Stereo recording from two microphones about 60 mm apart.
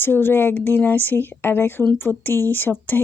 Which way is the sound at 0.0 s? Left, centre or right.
Left.